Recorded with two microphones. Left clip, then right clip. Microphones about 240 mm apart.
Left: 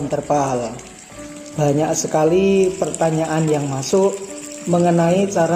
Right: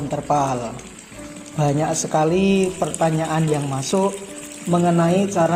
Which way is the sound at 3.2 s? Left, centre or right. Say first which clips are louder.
Left 3 dB; right.